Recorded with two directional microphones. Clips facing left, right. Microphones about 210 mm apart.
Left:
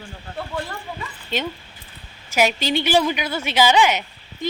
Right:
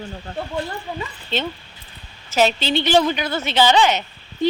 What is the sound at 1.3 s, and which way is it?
A woman's voice, 10° left (ahead or behind).